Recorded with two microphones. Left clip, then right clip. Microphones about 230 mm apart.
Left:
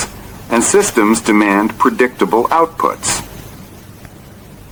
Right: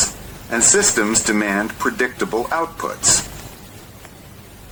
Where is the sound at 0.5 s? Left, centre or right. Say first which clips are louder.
Left 5 dB; left.